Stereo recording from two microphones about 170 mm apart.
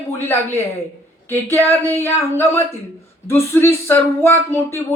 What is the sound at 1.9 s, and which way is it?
Speech, 15° left (ahead or behind).